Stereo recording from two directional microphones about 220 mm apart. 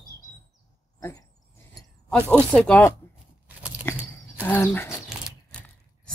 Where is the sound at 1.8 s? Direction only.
5° left (ahead or behind).